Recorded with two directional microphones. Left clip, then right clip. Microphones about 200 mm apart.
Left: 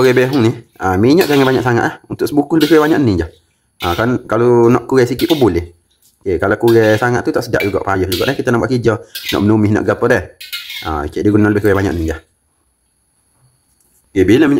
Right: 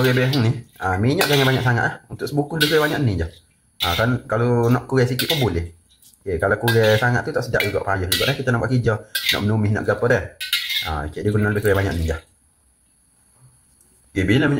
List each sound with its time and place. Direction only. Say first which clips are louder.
0.0 s speech: left 9 dB; 55° left (ahead or behind)
14.1 s speech: left 9 dB; 60° left (ahead or behind)